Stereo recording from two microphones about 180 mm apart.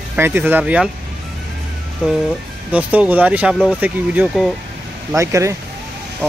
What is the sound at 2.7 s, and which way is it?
Speech, 10° right (ahead or behind).